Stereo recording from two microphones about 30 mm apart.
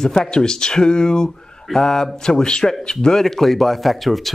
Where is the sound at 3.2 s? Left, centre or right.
Centre.